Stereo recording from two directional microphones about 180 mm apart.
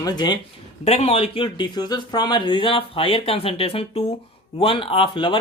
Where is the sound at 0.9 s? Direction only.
35° left (ahead or behind).